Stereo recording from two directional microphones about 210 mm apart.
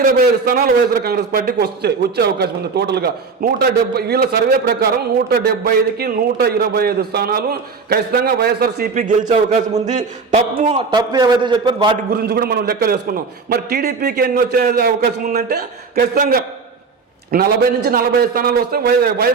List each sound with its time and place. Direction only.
0.4 s a man's voice: 45° right (ahead or behind); by 10.8 s 30° right (ahead or behind)
10.9 s a man's voice: 20° right (ahead or behind)
12.1 s a man's voice: 50° right (ahead or behind)